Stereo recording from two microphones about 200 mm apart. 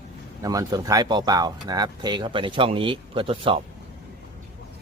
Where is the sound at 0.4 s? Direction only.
20° right (ahead or behind).